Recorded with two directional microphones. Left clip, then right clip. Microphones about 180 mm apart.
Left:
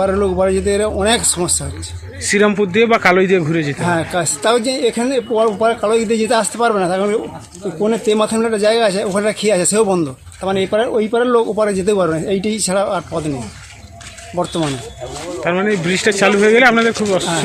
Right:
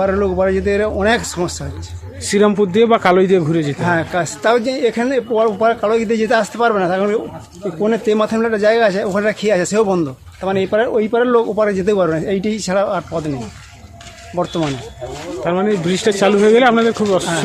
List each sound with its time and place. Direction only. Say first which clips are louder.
0.0 s speech: even; centre (ahead or behind)
2.2 s speech: even; 15° right (ahead or behind)
3.8 s speech: right 1 dB; centre (ahead or behind)
14.4 s speech: even; 5° left (ahead or behind)
15.4 s a man's voice: even; 10° right (ahead or behind)